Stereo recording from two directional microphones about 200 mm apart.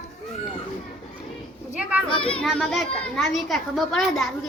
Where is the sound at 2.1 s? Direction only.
25° left (ahead or behind).